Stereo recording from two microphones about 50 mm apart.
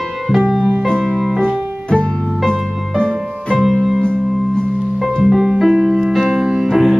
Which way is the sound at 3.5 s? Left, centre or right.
Centre.